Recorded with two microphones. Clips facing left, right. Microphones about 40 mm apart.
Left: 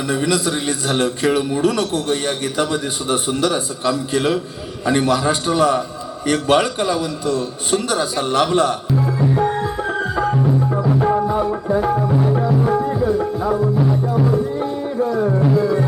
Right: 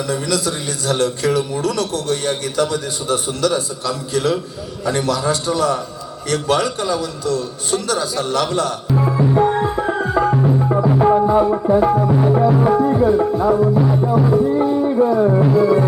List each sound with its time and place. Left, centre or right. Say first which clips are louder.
0.1 s a man's voice: left 4 dB; left
9.0 s music: right 4 dB; right
10.3 s music: right 2 dB; right
11.4 s music: right 4 dB; centre
12.9 s tabla: right 4 dB; right
13.4 s music: right 3 dB; centre